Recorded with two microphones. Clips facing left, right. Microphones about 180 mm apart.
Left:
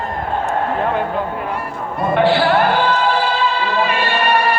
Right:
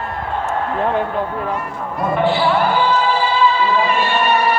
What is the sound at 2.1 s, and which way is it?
Music, 80° left.